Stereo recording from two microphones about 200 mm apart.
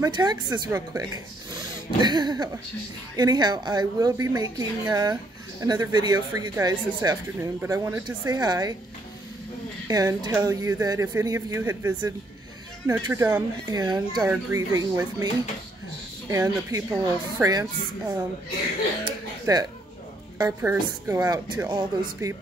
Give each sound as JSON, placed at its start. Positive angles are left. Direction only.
{"t": 0.0, "sound": "a woman's voice", "side_deg": -20}
{"t": 9.8, "sound": "speech", "side_deg": -20}
{"t": 16.3, "sound": "a woman's voice", "side_deg": -15}